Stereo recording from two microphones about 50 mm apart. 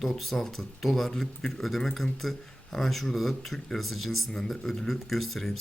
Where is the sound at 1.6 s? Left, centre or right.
Centre.